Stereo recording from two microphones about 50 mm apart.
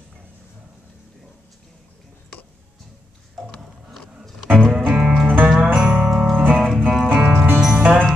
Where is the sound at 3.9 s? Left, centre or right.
Centre.